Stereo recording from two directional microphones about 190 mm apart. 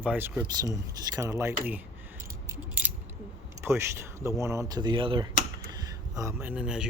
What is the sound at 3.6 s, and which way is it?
Speech, 15° right (ahead or behind).